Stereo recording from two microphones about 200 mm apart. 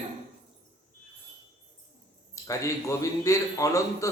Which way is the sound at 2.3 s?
15° left (ahead or behind).